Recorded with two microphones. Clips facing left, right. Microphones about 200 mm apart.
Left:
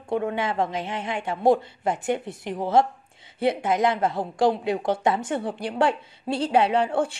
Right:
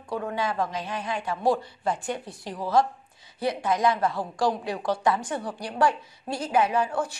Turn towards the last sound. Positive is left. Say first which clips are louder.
# left 3 dB
turn(degrees=30)  # may be behind; listen again after turning